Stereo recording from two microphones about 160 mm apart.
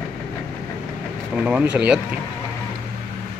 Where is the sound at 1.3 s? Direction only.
5° right (ahead or behind).